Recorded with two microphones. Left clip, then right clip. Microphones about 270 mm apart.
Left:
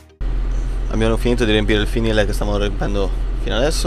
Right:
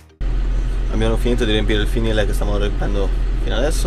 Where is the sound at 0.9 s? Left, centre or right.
Centre.